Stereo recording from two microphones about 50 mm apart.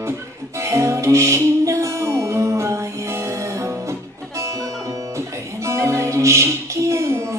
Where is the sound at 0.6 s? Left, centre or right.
Right.